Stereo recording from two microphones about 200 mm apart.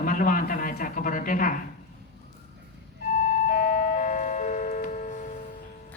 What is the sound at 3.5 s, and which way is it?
Music, 40° left (ahead or behind).